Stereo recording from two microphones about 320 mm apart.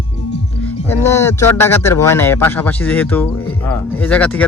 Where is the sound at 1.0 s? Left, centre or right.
Centre.